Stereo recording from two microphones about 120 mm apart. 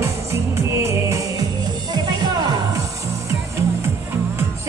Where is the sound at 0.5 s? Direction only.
25° right (ahead or behind).